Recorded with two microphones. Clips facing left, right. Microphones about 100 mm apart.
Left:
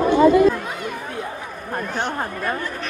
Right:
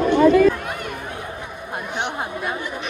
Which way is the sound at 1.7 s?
15° right (ahead or behind).